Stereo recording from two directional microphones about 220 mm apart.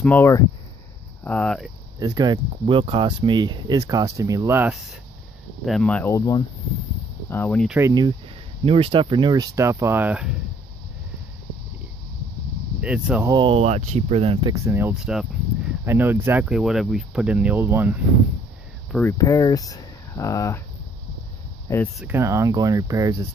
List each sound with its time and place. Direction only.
0.0 s speech: 10° left (ahead or behind)
2.0 s speech: 20° right (ahead or behind)
5.7 s speech: 5° left (ahead or behind)
7.7 s speech: 15° right (ahead or behind)
12.8 s speech: 5° right (ahead or behind)
13.3 s speech: 25° right (ahead or behind)
14.5 s speech: 10° right (ahead or behind)
18.9 s speech: 10° left (ahead or behind)
21.9 s speech: 10° right (ahead or behind)